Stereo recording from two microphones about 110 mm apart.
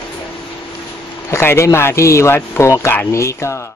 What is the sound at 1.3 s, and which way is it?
Speech, 25° left (ahead or behind).